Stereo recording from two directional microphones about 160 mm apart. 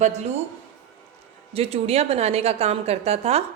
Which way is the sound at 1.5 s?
40° right (ahead or behind).